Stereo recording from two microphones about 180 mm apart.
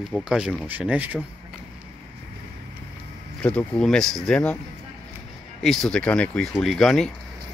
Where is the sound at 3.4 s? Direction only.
5° left (ahead or behind).